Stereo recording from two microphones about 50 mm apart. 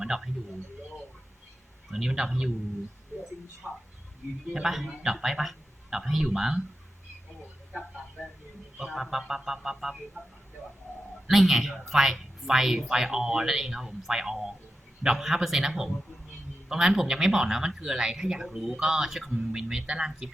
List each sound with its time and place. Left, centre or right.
0.0 s speech: centre
1.9 s speech: centre
3.6 s speech: right
4.6 s speech: centre
8.8 s speech: centre
11.3 s speech: centre